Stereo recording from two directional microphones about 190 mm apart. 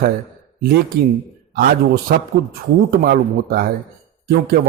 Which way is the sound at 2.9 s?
50° right (ahead or behind).